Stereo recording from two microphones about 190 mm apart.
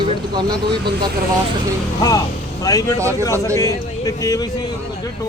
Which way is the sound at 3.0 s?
15° right (ahead or behind).